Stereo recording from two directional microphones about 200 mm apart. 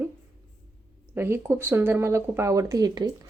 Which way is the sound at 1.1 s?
10° right (ahead or behind).